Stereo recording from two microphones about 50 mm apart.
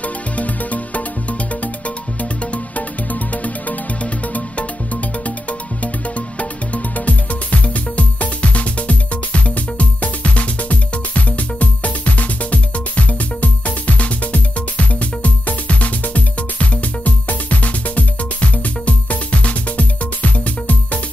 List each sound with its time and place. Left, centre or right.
0.0 s music: left
2.4 s music: left